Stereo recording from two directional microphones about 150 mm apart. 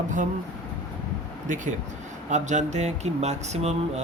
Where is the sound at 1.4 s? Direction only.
60° right (ahead or behind).